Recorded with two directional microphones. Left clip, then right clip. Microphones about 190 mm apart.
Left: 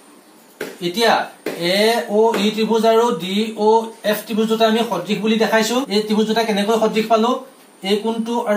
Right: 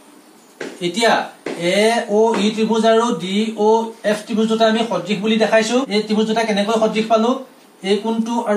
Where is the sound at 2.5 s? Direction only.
Centre (ahead or behind).